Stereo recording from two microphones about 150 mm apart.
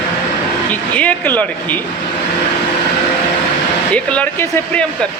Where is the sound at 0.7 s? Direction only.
10° left (ahead or behind).